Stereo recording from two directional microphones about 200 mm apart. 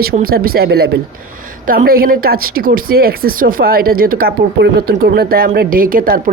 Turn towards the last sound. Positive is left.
turn(degrees=-45)  # may be behind; listen again after turning